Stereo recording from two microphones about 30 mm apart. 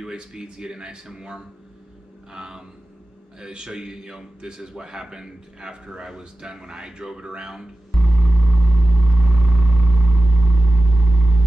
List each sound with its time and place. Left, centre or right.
0.1 s speech: right
7.9 s vehicle: centre